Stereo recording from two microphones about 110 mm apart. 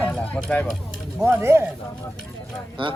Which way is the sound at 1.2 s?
25° right (ahead or behind).